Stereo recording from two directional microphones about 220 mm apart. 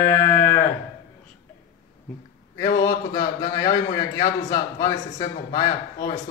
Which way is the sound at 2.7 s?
15° left (ahead or behind).